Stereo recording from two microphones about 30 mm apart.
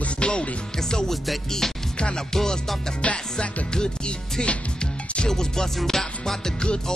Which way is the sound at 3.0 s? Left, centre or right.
Left.